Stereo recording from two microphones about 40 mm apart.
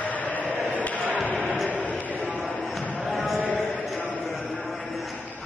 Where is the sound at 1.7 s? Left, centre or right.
Left.